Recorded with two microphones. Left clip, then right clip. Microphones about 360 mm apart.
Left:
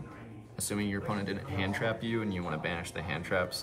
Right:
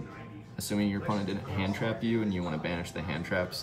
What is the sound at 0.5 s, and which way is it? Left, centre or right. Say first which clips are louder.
Speech: right 3 dB; centre.